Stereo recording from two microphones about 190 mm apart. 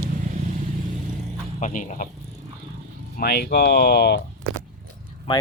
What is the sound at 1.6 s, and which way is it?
Speech, 40° left (ahead or behind).